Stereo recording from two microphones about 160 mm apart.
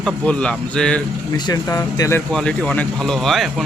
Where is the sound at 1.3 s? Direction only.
25° left (ahead or behind).